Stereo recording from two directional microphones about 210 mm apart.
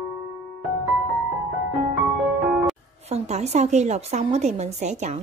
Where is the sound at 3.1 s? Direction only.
30° right (ahead or behind).